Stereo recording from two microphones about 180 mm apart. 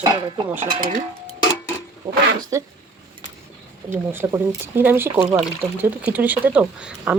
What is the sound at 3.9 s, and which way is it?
Speech, 10° right (ahead or behind).